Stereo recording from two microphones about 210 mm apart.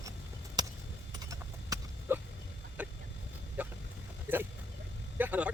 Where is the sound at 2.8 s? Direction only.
5° right (ahead or behind).